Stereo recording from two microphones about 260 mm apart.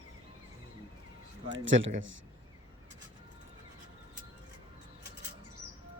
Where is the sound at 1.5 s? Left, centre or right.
Right.